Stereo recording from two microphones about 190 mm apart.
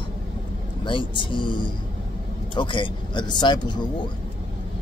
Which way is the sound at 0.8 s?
25° left (ahead or behind).